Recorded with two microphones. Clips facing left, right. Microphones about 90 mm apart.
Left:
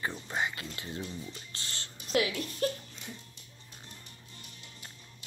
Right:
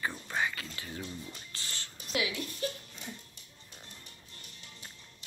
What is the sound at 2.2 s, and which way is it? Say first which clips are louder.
Speech: left 4 dB; 45° left (ahead or behind).